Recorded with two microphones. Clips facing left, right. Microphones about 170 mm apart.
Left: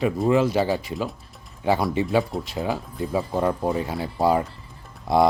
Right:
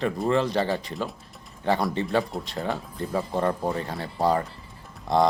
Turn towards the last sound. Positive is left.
turn(degrees=10)  # may be behind; listen again after turning